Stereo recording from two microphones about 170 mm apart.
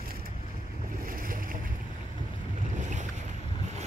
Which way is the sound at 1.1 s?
55° right (ahead or behind).